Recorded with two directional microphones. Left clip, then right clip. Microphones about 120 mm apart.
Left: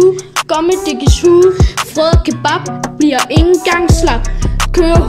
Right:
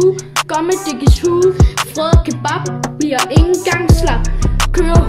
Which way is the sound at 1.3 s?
Centre (ahead or behind).